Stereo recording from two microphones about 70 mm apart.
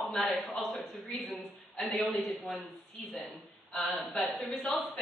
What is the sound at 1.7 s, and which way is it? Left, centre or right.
Speech, centre.